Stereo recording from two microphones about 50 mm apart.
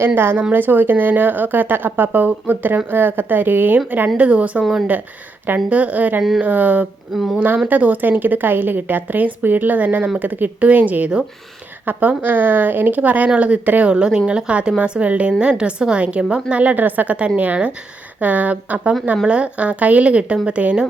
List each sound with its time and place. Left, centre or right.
0.0 s a woman's voice: right
0.5 s a woman's voice: right
4.2 s a woman's voice: right
5.6 s a woman's voice: right
7.1 s speech: centre
7.3 s a woman's voice: right
13.9 s a woman's voice: centre